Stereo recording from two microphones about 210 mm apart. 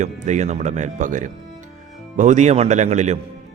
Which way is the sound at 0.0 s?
35° right (ahead or behind).